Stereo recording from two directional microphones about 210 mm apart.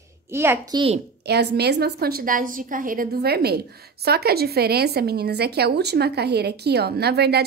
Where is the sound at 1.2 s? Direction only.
50° right (ahead or behind).